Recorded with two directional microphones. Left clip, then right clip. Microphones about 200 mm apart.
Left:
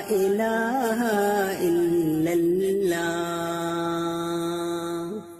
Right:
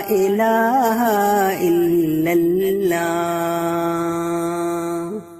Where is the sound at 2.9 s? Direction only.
30° right (ahead or behind).